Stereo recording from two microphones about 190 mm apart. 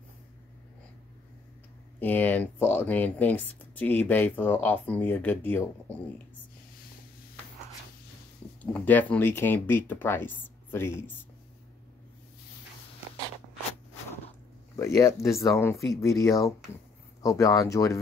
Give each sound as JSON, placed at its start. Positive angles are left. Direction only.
{"t": 2.0, "sound": "speech", "side_deg": 10}
{"t": 8.7, "sound": "speech", "side_deg": 10}
{"t": 14.8, "sound": "speech", "side_deg": 15}